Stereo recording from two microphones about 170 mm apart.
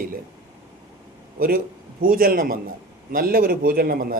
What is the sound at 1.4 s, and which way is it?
A man's voice, 60° right (ahead or behind).